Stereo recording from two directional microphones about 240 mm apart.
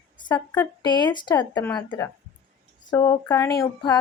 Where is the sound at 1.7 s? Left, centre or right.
Centre.